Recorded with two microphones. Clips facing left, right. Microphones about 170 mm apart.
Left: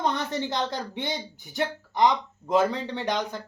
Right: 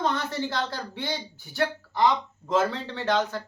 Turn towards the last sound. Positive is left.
turn(degrees=15)  # may be behind; listen again after turning